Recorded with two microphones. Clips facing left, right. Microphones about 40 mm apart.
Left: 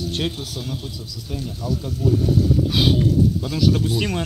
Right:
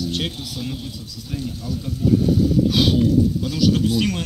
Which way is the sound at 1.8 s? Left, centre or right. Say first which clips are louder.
Even; centre.